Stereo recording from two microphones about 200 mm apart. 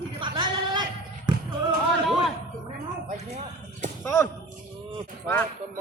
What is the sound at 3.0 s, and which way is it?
Speech, 35° right (ahead or behind).